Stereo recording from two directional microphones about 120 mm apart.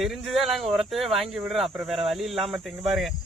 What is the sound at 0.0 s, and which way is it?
Speech, centre (ahead or behind).